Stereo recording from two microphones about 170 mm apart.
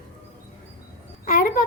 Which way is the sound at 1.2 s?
55° left (ahead or behind).